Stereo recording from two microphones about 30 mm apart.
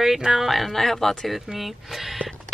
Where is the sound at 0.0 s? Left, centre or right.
Centre.